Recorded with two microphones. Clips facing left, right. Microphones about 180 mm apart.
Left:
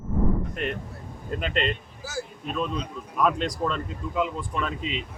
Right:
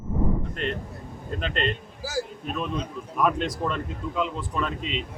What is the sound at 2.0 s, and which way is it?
Speech, 35° right (ahead or behind).